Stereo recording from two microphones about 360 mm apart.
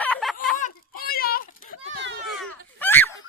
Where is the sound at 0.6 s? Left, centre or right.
Left.